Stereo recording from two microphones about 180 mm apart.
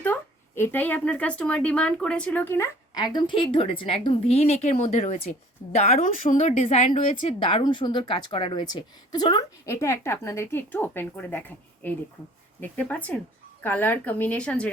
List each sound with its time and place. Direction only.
0.0 s speech: 10° left (ahead or behind); by 7.0 s 40° left (ahead or behind)
7.2 s a woman's voice: 30° left (ahead or behind); by 14.7 s 5° left (ahead or behind)